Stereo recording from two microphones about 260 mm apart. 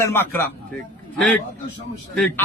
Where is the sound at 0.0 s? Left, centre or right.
Centre.